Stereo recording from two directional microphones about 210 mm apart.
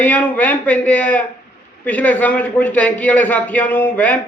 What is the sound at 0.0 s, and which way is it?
A man's voice, 10° left (ahead or behind).